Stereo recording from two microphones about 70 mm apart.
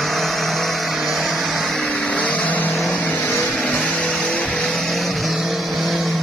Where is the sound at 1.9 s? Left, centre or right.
Centre.